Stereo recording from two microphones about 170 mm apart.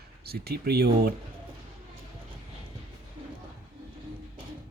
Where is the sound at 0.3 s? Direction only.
65° right (ahead or behind).